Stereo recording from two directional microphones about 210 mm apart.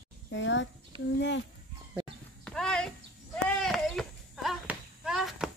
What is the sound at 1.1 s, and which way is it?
Speech, 55° left (ahead or behind).